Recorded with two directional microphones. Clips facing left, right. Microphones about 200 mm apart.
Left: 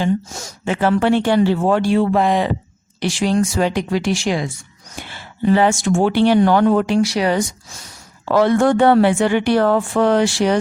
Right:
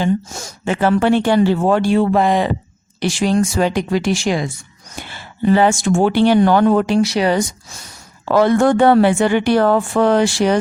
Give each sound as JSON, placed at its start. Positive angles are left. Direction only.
{"t": 0.0, "sound": "speech", "side_deg": -45}
{"t": 7.0, "sound": "speech", "side_deg": -25}
{"t": 8.2, "sound": "speech", "side_deg": -45}